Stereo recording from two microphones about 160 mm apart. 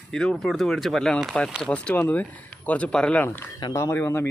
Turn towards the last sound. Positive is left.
turn(degrees=15)  # may be behind; listen again after turning